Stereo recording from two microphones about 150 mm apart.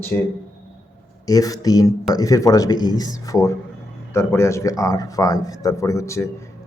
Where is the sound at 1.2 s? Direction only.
25° left (ahead or behind).